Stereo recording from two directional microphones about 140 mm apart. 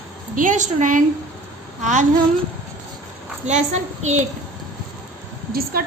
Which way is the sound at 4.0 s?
55° right (ahead or behind).